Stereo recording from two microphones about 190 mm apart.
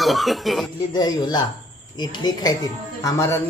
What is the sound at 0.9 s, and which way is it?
Speech, 20° left (ahead or behind).